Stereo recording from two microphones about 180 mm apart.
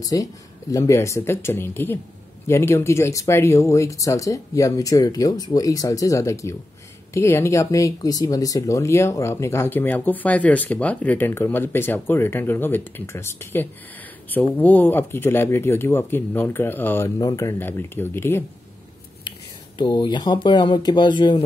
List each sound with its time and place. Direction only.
0.0 s speech: 20° left (ahead or behind)
19.8 s speech: 25° left (ahead or behind)